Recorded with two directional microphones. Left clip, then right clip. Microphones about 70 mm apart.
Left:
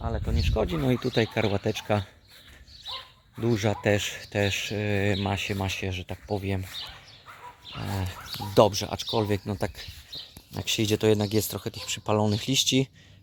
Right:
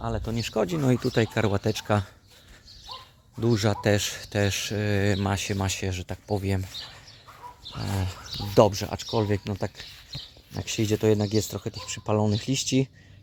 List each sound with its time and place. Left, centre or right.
0.0 s speech: centre
0.3 s speech: right
1.0 s speech: centre
3.4 s speech: centre
7.8 s speech: centre
9.0 s speech: centre
9.5 s speech: left
10.5 s speech: centre